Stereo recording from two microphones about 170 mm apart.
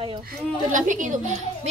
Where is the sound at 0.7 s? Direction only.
50° right (ahead or behind).